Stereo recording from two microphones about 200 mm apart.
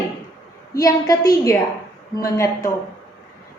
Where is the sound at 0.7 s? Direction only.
15° left (ahead or behind).